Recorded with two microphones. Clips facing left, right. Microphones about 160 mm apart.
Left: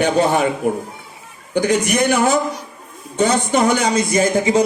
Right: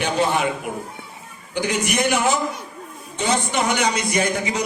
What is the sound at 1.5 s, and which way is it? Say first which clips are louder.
A man's voice: left 6 dB; 45° left (ahead or behind).